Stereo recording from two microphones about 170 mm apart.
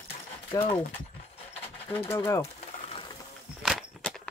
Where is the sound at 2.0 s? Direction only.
15° left (ahead or behind).